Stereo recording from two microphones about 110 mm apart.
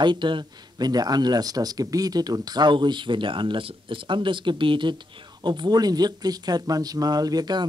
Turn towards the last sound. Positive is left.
turn(degrees=-40)  # may be behind; listen again after turning